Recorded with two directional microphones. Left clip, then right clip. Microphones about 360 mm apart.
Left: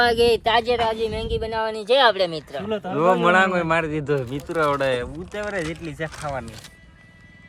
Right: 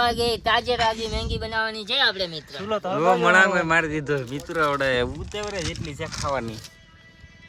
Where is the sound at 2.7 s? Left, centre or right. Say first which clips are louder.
Right 3 dB; centre.